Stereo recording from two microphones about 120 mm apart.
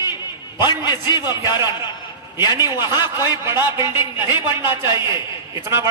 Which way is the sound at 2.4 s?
25° right (ahead or behind).